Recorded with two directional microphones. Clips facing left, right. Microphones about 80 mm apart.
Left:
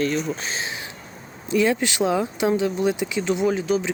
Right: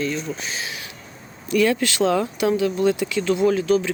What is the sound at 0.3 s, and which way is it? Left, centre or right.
Speech, left.